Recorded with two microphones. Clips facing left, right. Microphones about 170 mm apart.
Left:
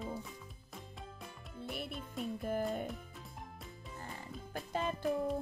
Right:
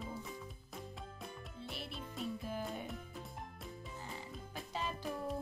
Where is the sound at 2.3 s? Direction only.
55° left (ahead or behind).